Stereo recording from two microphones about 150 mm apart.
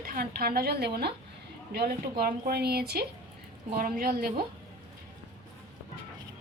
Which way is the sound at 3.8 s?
80° right.